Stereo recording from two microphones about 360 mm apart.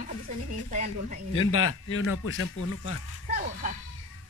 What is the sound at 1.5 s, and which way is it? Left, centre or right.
Speech, left.